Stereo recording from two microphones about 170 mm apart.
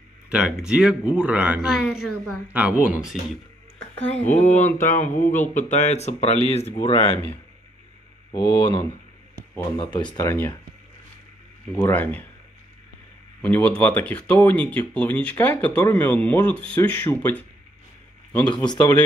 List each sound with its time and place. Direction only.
0.3 s speech: 5° right (ahead or behind)
4.0 s speech: 10° left (ahead or behind)
4.3 s a sound: 45° left (ahead or behind)
5.5 s speech: 45° left (ahead or behind); by 10.3 s 25° left (ahead or behind)
11.8 s speech: 10° left (ahead or behind)
13.4 s speech: 10° left (ahead or behind)
18.4 s speech: 25° left (ahead or behind)